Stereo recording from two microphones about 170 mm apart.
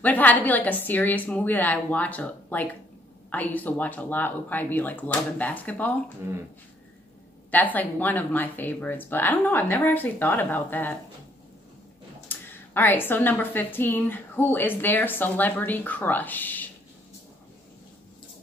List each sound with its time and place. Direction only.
0.0 s a woman's voice: 10° left (ahead or behind)
7.5 s a woman's voice: 10° left (ahead or behind)
12.3 s a woman's voice: 10° left (ahead or behind)